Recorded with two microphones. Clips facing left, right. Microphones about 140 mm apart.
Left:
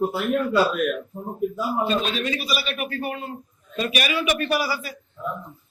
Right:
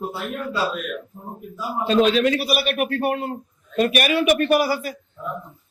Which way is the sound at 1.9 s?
90° right.